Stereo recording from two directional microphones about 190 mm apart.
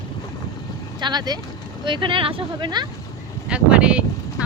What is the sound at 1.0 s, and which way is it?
Speech, 20° right (ahead or behind).